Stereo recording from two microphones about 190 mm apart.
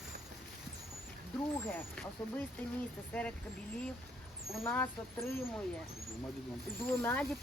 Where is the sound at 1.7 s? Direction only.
10° left (ahead or behind).